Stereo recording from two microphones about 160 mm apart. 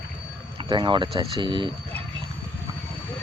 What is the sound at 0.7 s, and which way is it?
Speech, 30° right (ahead or behind).